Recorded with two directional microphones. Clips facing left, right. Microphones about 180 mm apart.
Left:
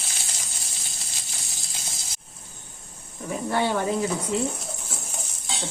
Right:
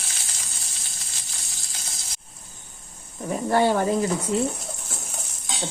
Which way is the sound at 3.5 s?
40° right (ahead or behind).